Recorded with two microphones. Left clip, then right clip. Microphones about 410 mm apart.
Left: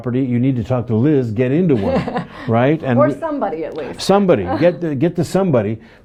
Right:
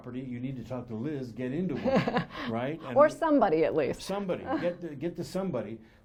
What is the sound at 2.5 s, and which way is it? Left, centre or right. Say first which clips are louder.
Speech: left 19 dB; left.